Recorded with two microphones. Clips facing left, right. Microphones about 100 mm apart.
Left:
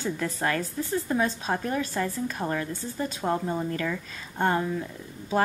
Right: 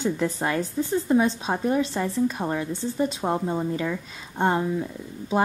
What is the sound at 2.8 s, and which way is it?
Speech, 30° right (ahead or behind).